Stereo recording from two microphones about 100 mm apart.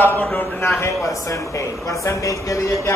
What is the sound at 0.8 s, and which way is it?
Speech, 30° left (ahead or behind).